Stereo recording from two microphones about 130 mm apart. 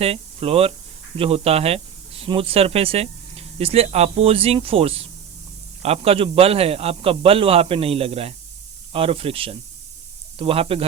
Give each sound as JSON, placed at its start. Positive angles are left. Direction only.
{"t": 0.0, "sound": "a man's voice", "side_deg": -50}